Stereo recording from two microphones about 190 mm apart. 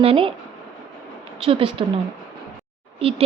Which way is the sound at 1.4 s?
30° right (ahead or behind).